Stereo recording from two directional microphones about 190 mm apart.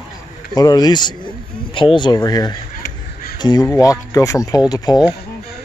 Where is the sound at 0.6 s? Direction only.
20° left (ahead or behind).